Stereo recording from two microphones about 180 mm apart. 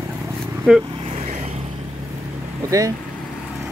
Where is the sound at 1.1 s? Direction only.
35° right (ahead or behind).